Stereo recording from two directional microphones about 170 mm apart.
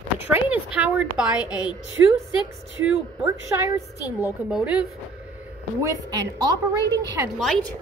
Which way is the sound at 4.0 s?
20° left (ahead or behind).